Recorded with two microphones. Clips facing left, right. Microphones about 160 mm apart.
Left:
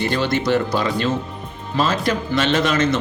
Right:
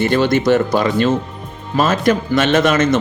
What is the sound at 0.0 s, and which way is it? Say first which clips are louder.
Speech: right 6 dB; 50° right (ahead or behind).